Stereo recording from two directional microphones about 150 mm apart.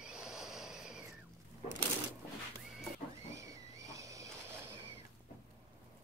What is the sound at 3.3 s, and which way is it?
Vehicle, 20° right (ahead or behind).